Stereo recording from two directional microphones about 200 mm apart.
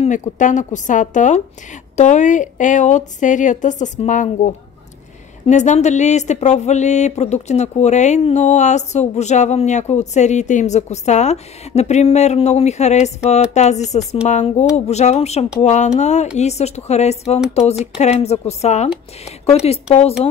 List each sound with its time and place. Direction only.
0.0 s speech: 40° left (ahead or behind)
5.5 s speech: 35° left (ahead or behind)